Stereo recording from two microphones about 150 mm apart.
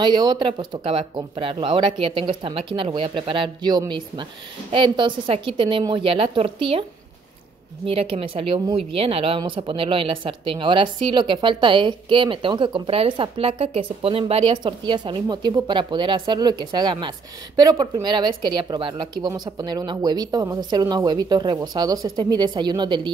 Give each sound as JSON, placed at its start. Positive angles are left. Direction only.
{"t": 0.0, "sound": "a woman's voice", "side_deg": -30}
{"t": 7.8, "sound": "a woman's voice", "side_deg": -40}